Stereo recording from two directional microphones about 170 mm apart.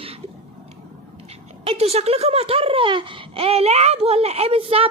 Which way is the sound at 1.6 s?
35° right (ahead or behind).